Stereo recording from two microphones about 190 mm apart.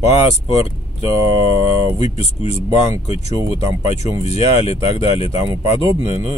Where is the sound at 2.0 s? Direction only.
35° left (ahead or behind).